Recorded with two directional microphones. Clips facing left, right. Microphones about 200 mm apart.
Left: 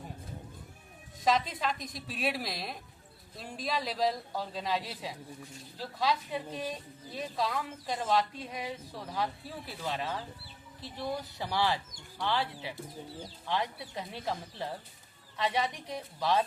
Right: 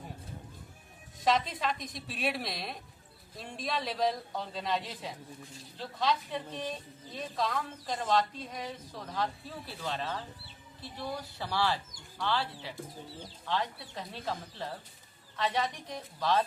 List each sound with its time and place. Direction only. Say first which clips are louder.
1.2 s a man's voice: even; centre (ahead or behind)